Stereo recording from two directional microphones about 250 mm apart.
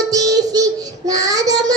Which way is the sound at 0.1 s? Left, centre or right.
Centre.